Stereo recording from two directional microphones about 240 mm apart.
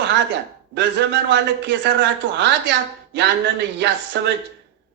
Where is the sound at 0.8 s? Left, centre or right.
Right.